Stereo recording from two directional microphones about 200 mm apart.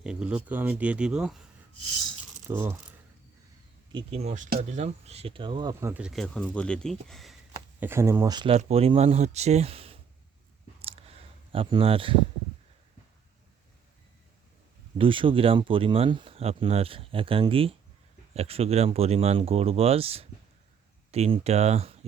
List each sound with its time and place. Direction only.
0.0 s speech: 5° right (ahead or behind)
2.5 s speech: 10° right (ahead or behind)
3.9 s speech: 30° right (ahead or behind)
5.9 s speech: 5° right (ahead or behind)
7.8 s speech: 10° right (ahead or behind)
8.5 s speech: 30° right (ahead or behind)
10.8 s a sound: 30° right (ahead or behind)
11.5 s speech: 25° right (ahead or behind)
14.9 s speech: 25° right (ahead or behind)